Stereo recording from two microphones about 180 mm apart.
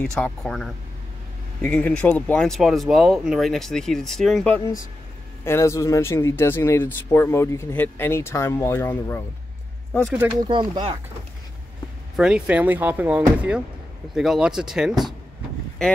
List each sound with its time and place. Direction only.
0.0 s speech: 5° left (ahead or behind)
5.4 s speech: 15° left (ahead or behind)
10.5 s speech: 25° right (ahead or behind)
12.2 s speech: 5° right (ahead or behind)